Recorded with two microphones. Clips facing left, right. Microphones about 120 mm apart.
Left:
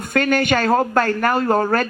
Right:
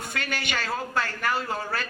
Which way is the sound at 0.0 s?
50° left (ahead or behind).